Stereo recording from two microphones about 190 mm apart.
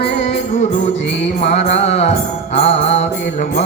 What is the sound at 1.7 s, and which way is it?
Mantra, 35° left (ahead or behind).